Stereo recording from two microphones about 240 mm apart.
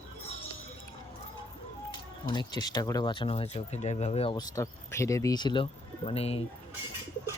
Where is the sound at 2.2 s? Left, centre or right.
Centre.